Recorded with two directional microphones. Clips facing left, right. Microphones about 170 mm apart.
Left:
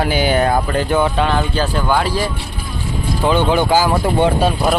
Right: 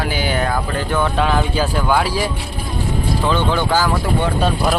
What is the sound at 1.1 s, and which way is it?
Speech, 5° right (ahead or behind).